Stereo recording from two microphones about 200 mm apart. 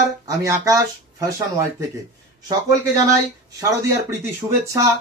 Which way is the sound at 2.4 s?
15° right (ahead or behind).